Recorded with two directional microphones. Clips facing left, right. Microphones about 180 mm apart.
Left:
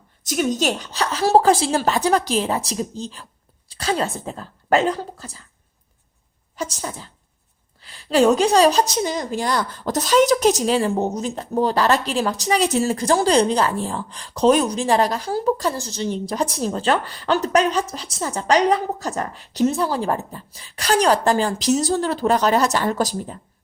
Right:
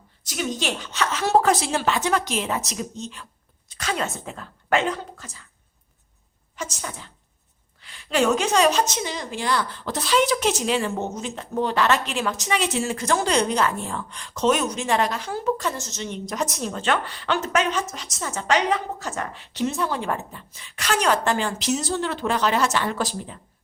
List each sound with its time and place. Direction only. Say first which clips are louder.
0.3 s a woman's voice: left 6 dB; 45° left (ahead or behind)
6.6 s a woman's voice: left 5 dB; 35° left (ahead or behind)